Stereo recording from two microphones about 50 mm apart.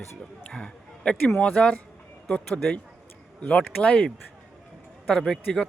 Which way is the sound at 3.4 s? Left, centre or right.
Left.